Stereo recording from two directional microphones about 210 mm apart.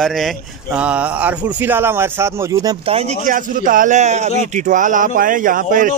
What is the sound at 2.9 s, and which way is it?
A man's voice, 30° right (ahead or behind).